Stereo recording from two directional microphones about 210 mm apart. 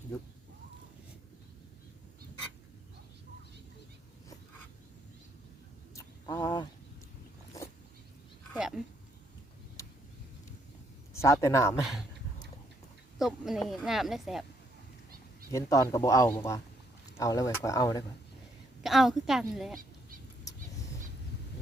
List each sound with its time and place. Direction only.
5.9 s a sound: 15° left (ahead or behind)
8.5 s a sound: 5° right (ahead or behind)
11.1 s speech: 15° left (ahead or behind)
11.8 s speech: centre (ahead or behind)
13.1 s speech: centre (ahead or behind)
15.5 s speech: 15° left (ahead or behind)
18.8 s speech: centre (ahead or behind)